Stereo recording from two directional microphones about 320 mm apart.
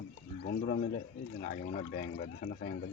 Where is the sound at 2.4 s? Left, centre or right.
Left.